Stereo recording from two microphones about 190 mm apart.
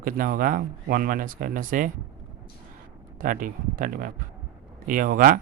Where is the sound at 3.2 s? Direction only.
45° right (ahead or behind).